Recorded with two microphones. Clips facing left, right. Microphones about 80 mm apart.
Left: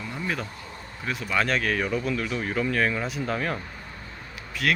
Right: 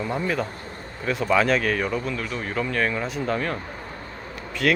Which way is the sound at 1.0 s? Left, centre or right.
Centre.